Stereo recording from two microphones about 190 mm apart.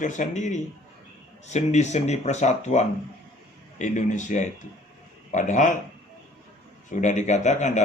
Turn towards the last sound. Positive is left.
turn(degrees=40)  # may be behind; listen again after turning